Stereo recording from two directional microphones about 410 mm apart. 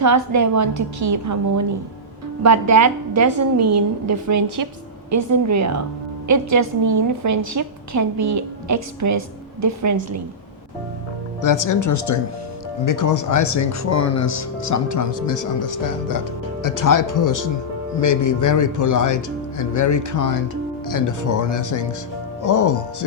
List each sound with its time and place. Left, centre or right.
0.0 s a woman's voice: right
11.4 s speech: left